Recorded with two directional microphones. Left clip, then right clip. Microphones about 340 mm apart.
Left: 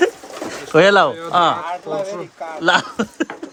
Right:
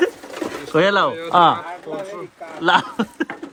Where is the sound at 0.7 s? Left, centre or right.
Centre.